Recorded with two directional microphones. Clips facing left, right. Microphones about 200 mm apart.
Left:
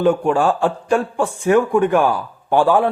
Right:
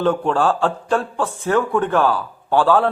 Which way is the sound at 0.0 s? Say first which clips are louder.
Left 2 dB; 10° left (ahead or behind).